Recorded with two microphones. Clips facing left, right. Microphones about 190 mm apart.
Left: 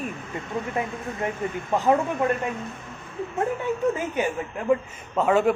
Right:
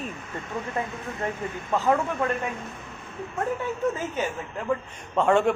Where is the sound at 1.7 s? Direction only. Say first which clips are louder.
Left 2 dB; 15° left (ahead or behind).